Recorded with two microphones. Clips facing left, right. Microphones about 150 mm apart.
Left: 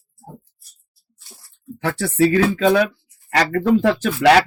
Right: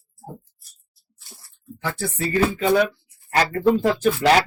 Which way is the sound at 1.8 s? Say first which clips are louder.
Left 9 dB; 80° left.